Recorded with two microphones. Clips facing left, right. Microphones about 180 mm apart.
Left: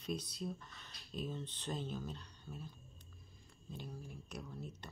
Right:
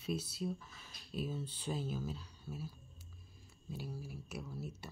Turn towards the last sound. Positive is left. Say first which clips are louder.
# right 3 dB
turn(degrees=-5)  # may be behind; listen again after turning